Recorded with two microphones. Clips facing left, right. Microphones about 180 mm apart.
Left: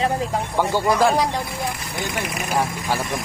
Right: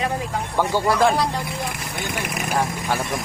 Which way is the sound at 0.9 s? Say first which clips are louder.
Left 1 dB; 10° left (ahead or behind).